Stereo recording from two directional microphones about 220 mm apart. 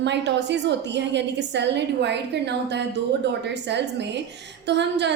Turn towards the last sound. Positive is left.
turn(degrees=-50)  # may be behind; listen again after turning